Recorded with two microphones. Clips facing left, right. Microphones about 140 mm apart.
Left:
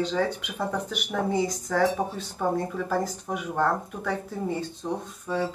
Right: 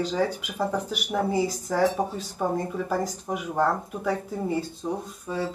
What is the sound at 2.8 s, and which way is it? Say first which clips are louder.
Speech: even; 10° right (ahead or behind).